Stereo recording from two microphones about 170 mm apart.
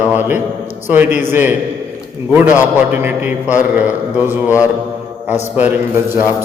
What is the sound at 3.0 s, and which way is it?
A man's voice, 10° right (ahead or behind).